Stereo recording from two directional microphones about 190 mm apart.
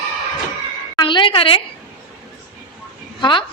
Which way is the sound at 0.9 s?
25° left (ahead or behind).